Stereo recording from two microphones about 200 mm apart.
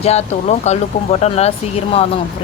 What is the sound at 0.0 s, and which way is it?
Speech, 35° left (ahead or behind).